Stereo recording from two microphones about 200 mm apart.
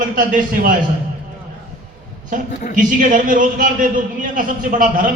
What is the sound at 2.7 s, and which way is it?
A man's voice, 40° right (ahead or behind).